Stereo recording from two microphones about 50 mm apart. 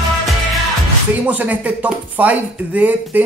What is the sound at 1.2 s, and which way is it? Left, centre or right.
Speech, right.